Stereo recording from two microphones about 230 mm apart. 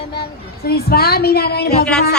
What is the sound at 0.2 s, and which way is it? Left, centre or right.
Speech, left.